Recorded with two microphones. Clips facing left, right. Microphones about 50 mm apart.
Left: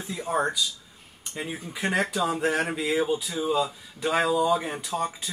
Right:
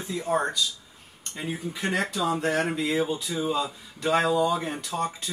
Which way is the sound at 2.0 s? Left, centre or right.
Left.